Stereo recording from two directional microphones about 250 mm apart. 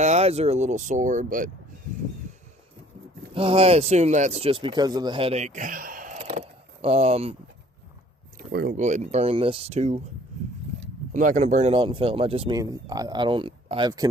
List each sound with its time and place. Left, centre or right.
0.0 s speech: right
3.3 s speech: right
8.4 s speech: right
11.1 s speech: right